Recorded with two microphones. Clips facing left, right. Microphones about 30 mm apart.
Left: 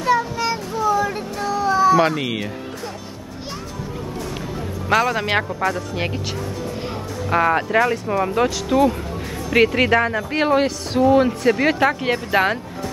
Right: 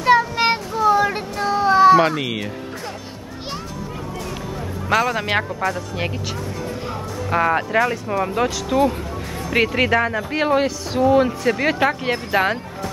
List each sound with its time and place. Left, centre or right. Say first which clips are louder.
0.4 s a sound: right 4 dB; right
2.0 s speech: even; centre
4.8 s speech: left 1 dB; centre
7.2 s speech: left 1 dB; centre